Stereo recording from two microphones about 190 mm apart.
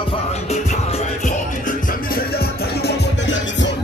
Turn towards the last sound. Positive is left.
turn(degrees=70)  # may be behind; listen again after turning